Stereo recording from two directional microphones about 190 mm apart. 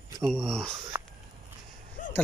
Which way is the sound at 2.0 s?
45° left (ahead or behind).